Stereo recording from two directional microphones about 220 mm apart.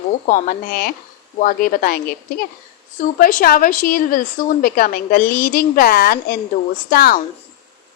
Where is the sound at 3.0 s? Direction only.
40° left (ahead or behind).